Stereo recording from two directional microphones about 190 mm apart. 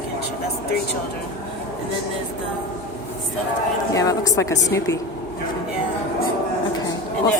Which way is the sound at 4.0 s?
20° left (ahead or behind).